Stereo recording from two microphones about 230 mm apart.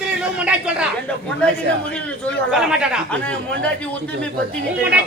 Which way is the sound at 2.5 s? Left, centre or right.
Centre.